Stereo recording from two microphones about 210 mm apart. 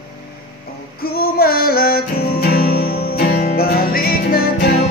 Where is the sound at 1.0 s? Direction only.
45° left (ahead or behind).